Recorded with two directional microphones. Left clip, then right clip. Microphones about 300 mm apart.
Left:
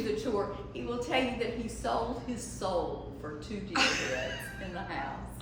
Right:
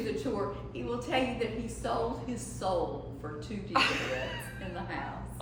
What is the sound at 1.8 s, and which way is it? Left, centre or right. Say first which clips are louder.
Speech: left 1 dB; centre.